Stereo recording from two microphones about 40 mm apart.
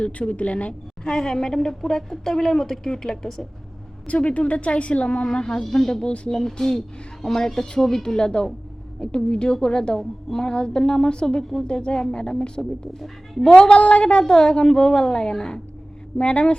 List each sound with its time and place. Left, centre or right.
0.0 s a woman's voice: left
0.7 s a woman's voice: centre
4.0 s a woman's voice: left
5.6 s a woman's voice: centre
6.1 s a woman's voice: left
6.3 s a woman's voice: centre
9.9 s a woman's voice: centre
10.3 s a woman's voice: centre
13.6 s a woman's voice: left
16.1 s a woman's voice: left